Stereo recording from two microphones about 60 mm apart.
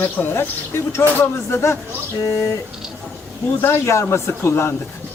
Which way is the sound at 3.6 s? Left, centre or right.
Left.